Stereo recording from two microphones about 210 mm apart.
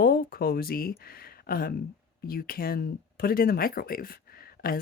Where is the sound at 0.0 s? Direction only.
45° left (ahead or behind).